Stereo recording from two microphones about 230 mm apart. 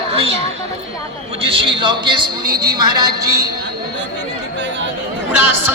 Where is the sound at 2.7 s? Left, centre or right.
Centre.